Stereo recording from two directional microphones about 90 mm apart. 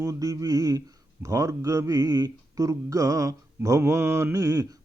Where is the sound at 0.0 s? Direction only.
40° right (ahead or behind).